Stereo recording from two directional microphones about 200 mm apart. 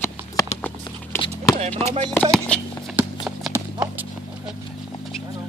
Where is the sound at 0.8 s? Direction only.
20° left (ahead or behind).